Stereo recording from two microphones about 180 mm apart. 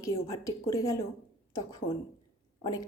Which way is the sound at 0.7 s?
15° left (ahead or behind).